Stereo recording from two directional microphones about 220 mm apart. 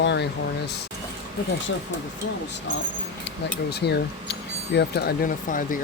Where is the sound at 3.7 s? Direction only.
45° left (ahead or behind).